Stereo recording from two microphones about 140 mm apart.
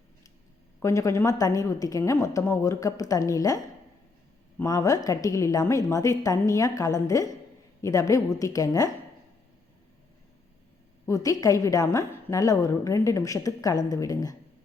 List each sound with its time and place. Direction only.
0.8 s a woman's voice: 20° left (ahead or behind)
4.6 s a woman's voice: 25° left (ahead or behind)
11.0 s a woman's voice: 25° left (ahead or behind)